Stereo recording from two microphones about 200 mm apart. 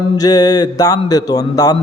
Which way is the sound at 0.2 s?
20° left (ahead or behind).